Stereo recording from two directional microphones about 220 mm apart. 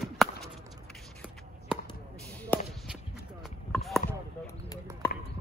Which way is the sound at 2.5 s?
10° left (ahead or behind).